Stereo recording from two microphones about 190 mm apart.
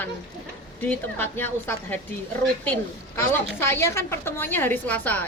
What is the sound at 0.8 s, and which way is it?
A woman's voice, 10° left (ahead or behind).